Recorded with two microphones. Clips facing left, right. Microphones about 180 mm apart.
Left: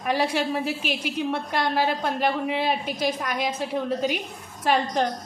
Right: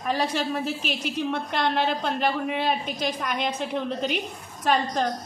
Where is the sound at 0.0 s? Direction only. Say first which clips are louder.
Left 2 dB; 10° left (ahead or behind).